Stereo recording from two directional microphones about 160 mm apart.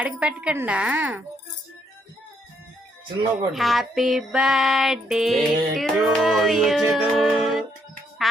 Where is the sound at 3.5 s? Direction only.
Centre (ahead or behind).